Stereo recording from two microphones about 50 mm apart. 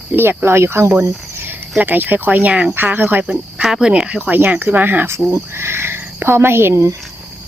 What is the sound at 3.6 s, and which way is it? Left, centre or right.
Speech, centre.